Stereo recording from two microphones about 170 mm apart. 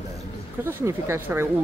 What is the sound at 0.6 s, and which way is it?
Speech, 15° right (ahead or behind).